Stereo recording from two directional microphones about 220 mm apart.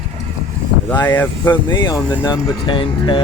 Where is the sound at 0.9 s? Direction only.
10° left (ahead or behind).